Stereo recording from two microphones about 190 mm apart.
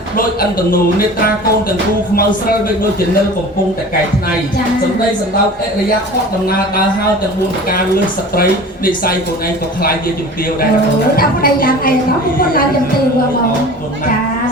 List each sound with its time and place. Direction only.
11.2 s a woman's voice: 50° left (ahead or behind)